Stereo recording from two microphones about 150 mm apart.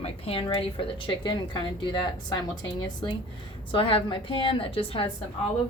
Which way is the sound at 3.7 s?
35° left (ahead or behind).